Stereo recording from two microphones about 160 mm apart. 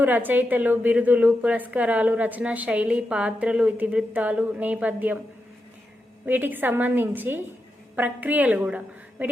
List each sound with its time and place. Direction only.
0.0 s a woman's voice: 10° right (ahead or behind)
6.2 s a woman's voice: 10° right (ahead or behind)